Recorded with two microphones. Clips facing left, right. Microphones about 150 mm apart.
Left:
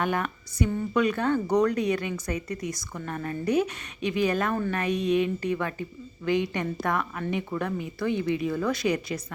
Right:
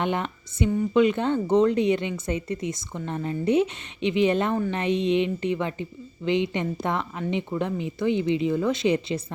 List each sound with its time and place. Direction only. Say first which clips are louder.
0.0 s a woman's voice: right 1 dB; 25° right (ahead or behind)